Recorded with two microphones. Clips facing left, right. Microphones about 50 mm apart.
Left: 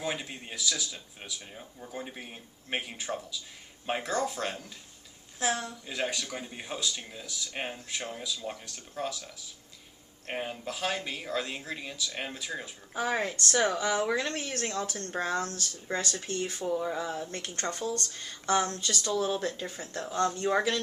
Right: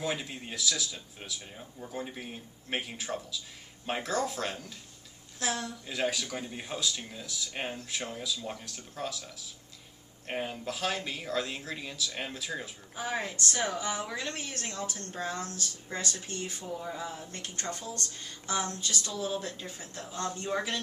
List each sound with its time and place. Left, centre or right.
0.0 s speech: centre
5.4 s speech: centre
13.1 s speech: left